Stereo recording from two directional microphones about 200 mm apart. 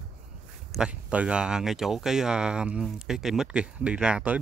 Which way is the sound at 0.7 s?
5° right (ahead or behind).